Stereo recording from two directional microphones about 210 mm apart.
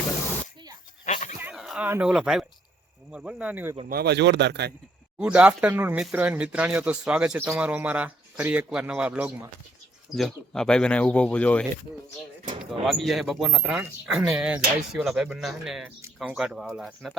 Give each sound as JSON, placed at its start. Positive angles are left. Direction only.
{"t": 1.0, "sound": "dog", "side_deg": 35}
{"t": 1.4, "sound": "speech", "side_deg": -5}
{"t": 3.8, "sound": "a man's voice", "side_deg": -50}
{"t": 5.2, "sound": "speech", "side_deg": -5}
{"t": 12.8, "sound": "speech", "side_deg": 0}